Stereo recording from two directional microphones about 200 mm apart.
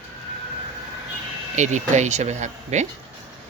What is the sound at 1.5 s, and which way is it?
Speech, 35° right (ahead or behind).